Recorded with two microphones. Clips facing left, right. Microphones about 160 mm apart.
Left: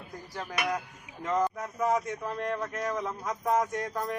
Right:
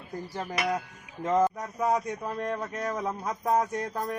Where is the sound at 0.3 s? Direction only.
40° right (ahead or behind).